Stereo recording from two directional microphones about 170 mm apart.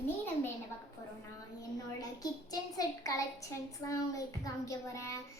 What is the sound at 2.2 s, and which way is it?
Child singing, 20° left (ahead or behind).